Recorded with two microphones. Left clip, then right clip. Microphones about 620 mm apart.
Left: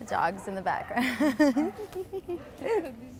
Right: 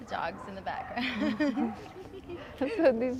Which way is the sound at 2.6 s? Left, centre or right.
Right.